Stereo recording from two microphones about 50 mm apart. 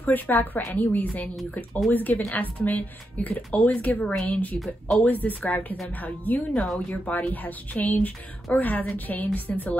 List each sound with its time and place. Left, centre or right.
0.0 s speech: left
4.6 s speech: centre
5.0 s speech: left